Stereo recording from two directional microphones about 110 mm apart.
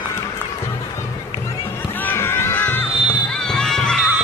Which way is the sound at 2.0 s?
20° left (ahead or behind).